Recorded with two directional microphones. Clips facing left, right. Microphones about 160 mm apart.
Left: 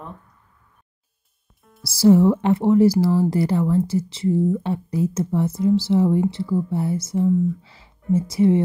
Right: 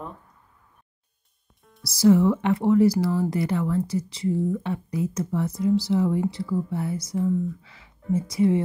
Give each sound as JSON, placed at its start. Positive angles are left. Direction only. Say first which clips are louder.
{"t": 1.7, "sound": "music", "louder": "left 2 dB", "side_deg": 5}
{"t": 2.0, "sound": "speech", "louder": "left 3 dB", "side_deg": 30}